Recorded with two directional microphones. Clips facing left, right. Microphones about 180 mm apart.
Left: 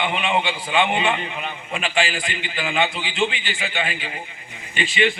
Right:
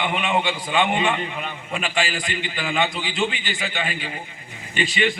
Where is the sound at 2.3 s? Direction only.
40° right (ahead or behind).